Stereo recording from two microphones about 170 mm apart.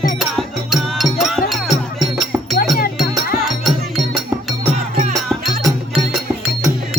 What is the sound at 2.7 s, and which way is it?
Music, 60° left (ahead or behind).